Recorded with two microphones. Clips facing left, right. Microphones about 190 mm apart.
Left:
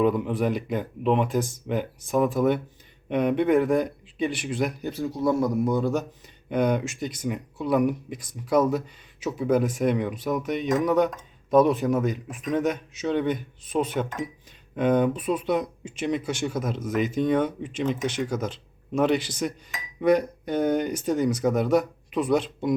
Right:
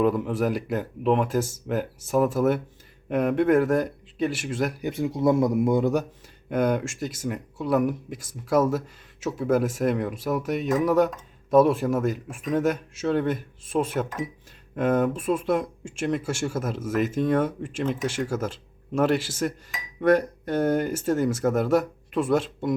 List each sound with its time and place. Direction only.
0.0 s speech: centre (ahead or behind)
4.9 s a man's voice: 25° right (ahead or behind)
6.5 s speech: 5° right (ahead or behind)